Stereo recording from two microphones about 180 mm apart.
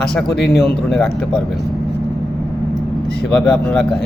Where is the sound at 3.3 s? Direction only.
5° left (ahead or behind).